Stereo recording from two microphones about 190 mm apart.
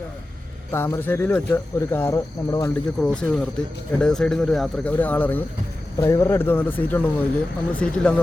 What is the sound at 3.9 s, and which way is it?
Speech, 5° left (ahead or behind).